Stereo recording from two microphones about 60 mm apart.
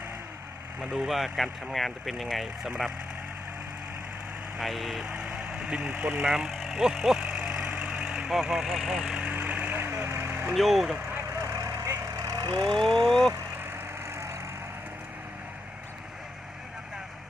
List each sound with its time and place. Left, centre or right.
0.8 s speech: centre
4.5 s speech: centre
5.0 s vehicle: centre
9.3 s vehicle: right
10.5 s speech: centre
11.4 s vehicle: right
12.7 s speech: centre
14.0 s vehicle: right